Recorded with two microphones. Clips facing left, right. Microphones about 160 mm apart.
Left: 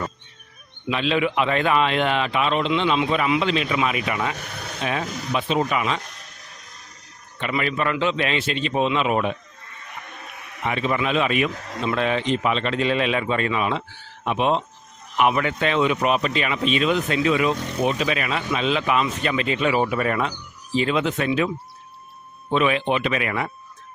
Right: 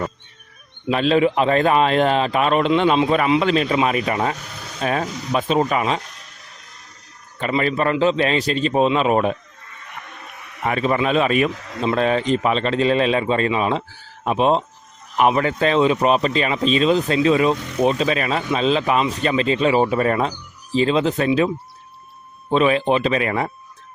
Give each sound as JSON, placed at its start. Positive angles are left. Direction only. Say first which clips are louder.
{"t": 0.9, "sound": "speech", "louder": "right 5 dB", "side_deg": -40}
{"t": 7.3, "sound": "speech", "louder": "right 4 dB", "side_deg": -40}
{"t": 10.6, "sound": "speech", "louder": "right 4 dB", "side_deg": -45}